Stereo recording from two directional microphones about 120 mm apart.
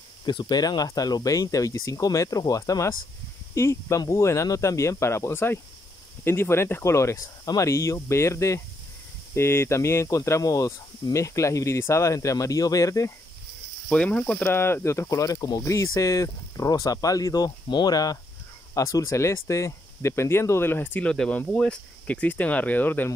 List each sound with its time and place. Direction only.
0.2 s speech: 35° left (ahead or behind)
13.8 s speech: 10° left (ahead or behind)